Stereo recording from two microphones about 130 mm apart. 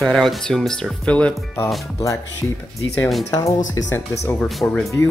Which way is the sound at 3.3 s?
25° left (ahead or behind).